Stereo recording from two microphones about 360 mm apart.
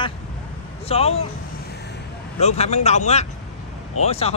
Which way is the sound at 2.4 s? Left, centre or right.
Centre.